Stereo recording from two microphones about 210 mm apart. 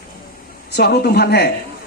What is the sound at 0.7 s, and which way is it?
Speech, 50° left (ahead or behind).